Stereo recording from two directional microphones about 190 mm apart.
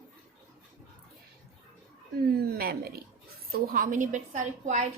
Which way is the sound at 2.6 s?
55° right (ahead or behind).